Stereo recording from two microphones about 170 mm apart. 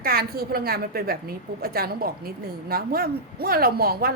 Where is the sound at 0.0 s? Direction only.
60° right (ahead or behind).